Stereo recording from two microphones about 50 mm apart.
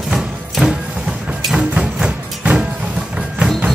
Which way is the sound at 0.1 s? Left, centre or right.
Centre.